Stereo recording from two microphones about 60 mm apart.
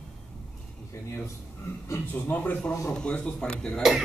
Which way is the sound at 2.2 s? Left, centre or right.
Left.